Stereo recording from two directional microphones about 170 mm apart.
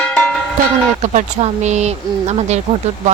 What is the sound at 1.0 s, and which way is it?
Speech, 45° right (ahead or behind).